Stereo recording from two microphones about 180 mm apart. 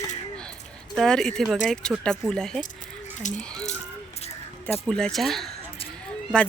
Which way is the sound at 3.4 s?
5° left (ahead or behind).